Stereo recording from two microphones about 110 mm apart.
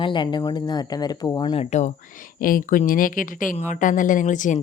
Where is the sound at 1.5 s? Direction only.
85° left.